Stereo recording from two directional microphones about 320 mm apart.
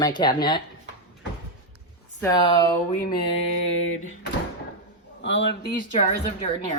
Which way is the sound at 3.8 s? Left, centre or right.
Left.